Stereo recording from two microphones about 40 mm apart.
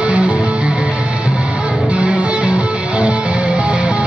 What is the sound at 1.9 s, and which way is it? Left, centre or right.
Music, right.